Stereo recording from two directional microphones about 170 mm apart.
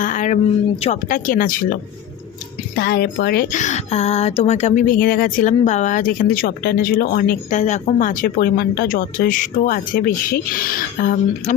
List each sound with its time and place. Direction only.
0.0 s a sound: 50° left (ahead or behind)
0.8 s speech: 45° left (ahead or behind)
2.7 s speech: 65° left (ahead or behind)